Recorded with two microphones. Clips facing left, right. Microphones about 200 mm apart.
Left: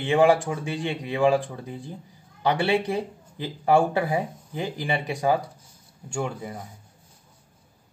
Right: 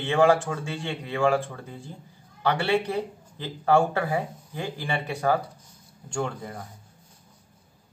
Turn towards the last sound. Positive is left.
turn(degrees=10)  # may be behind; listen again after turning